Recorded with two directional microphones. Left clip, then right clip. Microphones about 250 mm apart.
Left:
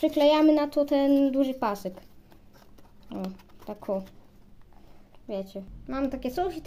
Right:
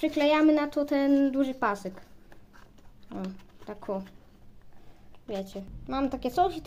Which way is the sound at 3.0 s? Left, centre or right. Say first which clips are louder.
Left 2 dB; centre.